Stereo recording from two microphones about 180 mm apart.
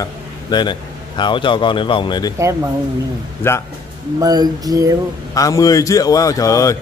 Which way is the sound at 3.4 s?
15° left (ahead or behind).